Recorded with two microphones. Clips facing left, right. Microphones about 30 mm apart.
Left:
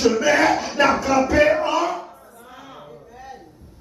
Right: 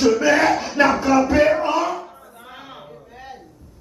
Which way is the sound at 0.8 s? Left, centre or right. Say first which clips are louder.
Right 1 dB; right.